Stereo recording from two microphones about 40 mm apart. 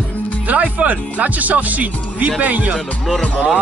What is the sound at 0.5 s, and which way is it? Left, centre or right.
Speech, right.